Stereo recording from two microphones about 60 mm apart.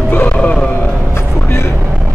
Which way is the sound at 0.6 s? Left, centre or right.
Left.